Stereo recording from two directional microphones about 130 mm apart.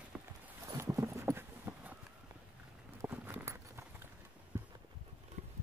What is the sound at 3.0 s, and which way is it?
Clip-clop, 15° right (ahead or behind).